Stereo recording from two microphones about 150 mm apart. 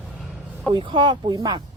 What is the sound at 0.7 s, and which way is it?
Speech, 35° right (ahead or behind).